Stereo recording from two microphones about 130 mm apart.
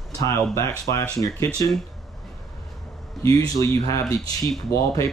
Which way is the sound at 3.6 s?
20° left (ahead or behind).